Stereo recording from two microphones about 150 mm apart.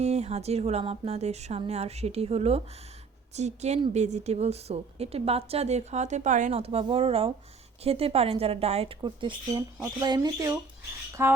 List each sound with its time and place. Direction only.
0.0 s a woman's voice: 45° right (ahead or behind)
9.0 s speech: 30° right (ahead or behind)